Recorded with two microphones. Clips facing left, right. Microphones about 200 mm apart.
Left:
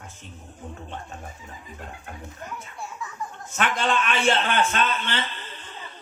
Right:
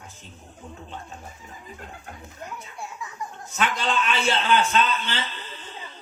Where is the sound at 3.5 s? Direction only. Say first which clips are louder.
Left 1 dB; 50° left (ahead or behind).